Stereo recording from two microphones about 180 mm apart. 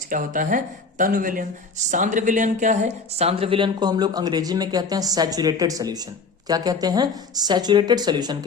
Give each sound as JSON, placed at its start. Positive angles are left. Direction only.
{"t": 0.1, "sound": "speech", "side_deg": -45}